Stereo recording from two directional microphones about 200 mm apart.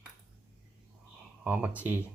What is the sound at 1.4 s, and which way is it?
Speech, 5° right (ahead or behind).